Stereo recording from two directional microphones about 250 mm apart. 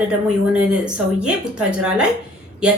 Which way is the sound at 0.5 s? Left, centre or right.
Centre.